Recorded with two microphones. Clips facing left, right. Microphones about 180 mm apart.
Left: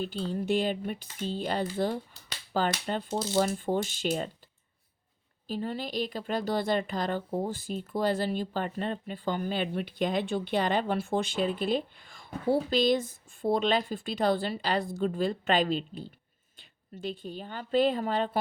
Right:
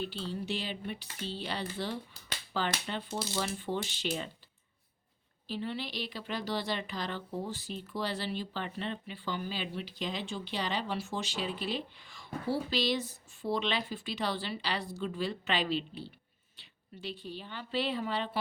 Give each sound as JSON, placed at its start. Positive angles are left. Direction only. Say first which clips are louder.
{"t": 0.0, "sound": "speech", "louder": "left 5 dB", "side_deg": 45}
{"t": 5.5, "sound": "speech", "louder": "left 4 dB", "side_deg": 45}